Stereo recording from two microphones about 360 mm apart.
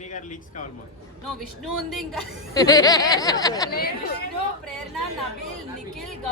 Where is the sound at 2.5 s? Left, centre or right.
Centre.